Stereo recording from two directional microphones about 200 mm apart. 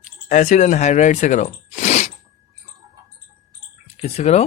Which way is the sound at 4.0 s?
35° left (ahead or behind).